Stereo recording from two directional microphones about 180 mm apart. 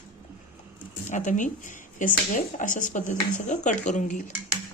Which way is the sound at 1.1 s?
45° left (ahead or behind).